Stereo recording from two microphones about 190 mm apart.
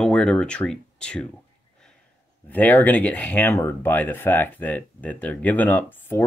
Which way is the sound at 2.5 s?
10° left (ahead or behind).